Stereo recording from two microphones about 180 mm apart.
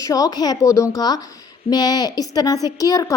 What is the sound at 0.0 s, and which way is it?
A woman's voice, 20° left (ahead or behind).